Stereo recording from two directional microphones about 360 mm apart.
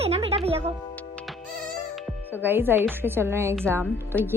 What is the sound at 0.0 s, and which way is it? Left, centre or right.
Music, centre.